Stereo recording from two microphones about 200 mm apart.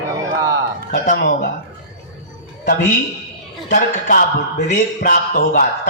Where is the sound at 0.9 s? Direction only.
45° left (ahead or behind).